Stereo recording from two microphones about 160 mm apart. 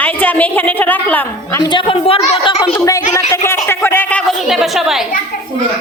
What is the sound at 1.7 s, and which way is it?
Speech, 30° left (ahead or behind).